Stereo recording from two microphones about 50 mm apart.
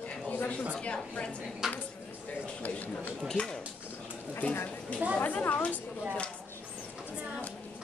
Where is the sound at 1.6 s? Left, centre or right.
Centre.